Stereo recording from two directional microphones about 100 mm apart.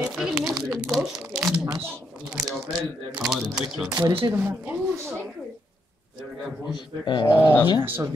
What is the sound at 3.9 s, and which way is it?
Speech, 25° right (ahead or behind).